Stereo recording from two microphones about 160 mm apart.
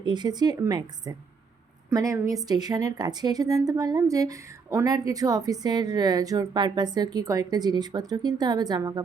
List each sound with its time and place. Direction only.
0.0 s a woman's voice: 25° right (ahead or behind)